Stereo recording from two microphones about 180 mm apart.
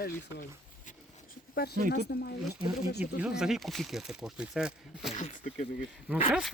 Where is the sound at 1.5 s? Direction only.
60° left (ahead or behind).